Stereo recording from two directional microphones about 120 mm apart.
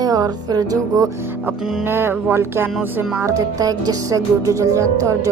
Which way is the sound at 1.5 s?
20° right (ahead or behind).